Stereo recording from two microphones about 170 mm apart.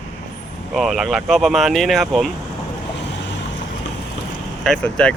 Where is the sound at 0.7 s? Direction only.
Centre (ahead or behind).